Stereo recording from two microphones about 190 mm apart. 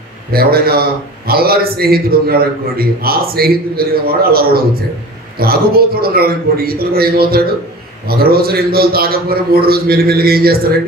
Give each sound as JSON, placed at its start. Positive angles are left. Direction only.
{"t": 0.3, "sound": "a man's voice", "side_deg": -55}